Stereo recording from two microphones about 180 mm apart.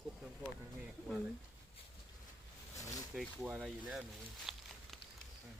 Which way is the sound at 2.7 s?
20° left (ahead or behind).